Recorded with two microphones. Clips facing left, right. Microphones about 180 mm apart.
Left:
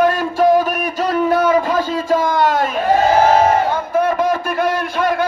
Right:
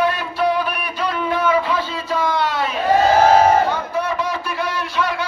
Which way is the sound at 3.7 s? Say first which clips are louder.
Left 5 dB; 50° left (ahead or behind).